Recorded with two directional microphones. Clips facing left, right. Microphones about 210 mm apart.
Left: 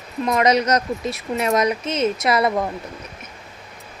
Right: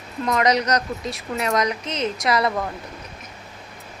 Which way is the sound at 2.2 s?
25° left (ahead or behind).